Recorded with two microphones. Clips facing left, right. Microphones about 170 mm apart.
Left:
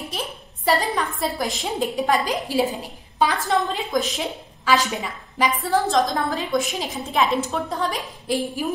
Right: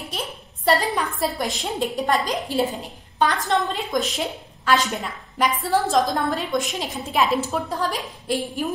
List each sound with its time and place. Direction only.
0.1 s a woman's voice: centre (ahead or behind)